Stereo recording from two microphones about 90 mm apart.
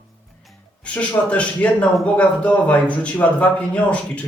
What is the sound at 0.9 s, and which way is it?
Speech, 15° left (ahead or behind).